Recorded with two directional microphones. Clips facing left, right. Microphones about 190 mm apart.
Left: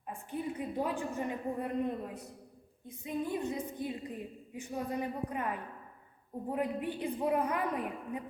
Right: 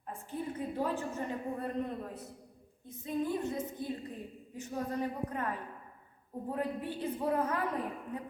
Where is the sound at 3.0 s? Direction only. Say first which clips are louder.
Right 1 dB; 15° left (ahead or behind).